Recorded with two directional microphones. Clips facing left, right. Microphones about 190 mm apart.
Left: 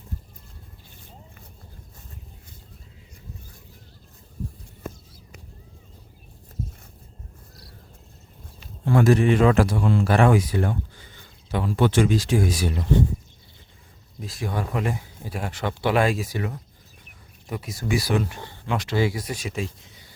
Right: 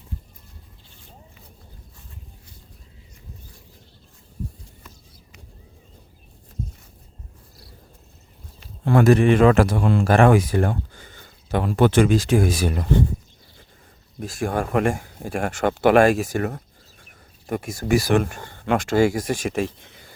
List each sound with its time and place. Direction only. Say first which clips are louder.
4.8 s a sound: left 14 dB; 50° left (ahead or behind)
8.8 s a man's voice: right 3 dB; 60° right (ahead or behind)
14.2 s speech: right 5 dB; 50° right (ahead or behind)